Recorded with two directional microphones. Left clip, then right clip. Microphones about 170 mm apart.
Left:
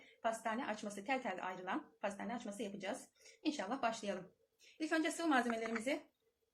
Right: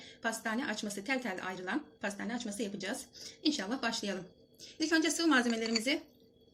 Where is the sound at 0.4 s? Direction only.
75° right (ahead or behind).